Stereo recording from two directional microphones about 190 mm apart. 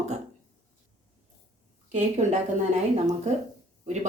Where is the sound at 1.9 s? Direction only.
35° right (ahead or behind).